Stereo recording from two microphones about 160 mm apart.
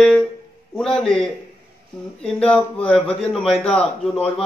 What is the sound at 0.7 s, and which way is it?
A man's voice, 5° left (ahead or behind).